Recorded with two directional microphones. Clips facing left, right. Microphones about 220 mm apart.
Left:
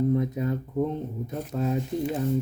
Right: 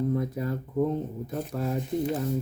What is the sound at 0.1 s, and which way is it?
Speech, 20° left (ahead or behind).